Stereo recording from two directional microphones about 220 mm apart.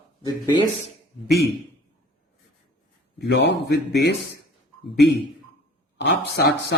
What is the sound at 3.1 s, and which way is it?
Speech, 50° left (ahead or behind).